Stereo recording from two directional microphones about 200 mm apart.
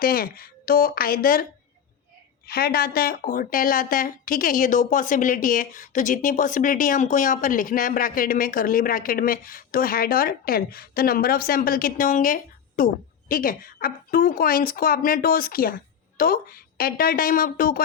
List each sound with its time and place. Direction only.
0.0 s speech: 45° left (ahead or behind)
2.5 s speech: 50° left (ahead or behind)